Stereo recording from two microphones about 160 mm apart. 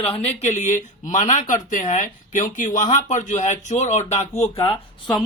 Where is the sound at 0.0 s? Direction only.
40° left (ahead or behind).